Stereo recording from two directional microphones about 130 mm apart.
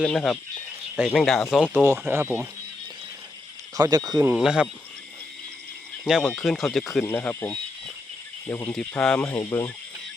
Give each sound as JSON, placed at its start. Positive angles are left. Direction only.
{"t": 0.0, "sound": "speech", "side_deg": 5}
{"t": 1.7, "sound": "speech", "side_deg": -15}
{"t": 3.8, "sound": "speech", "side_deg": -30}
{"t": 4.4, "sound": "speech", "side_deg": -5}
{"t": 6.1, "sound": "speech", "side_deg": 0}
{"t": 7.0, "sound": "speech", "side_deg": 15}
{"t": 9.0, "sound": "speech", "side_deg": 5}
{"t": 9.4, "sound": "speech", "side_deg": 25}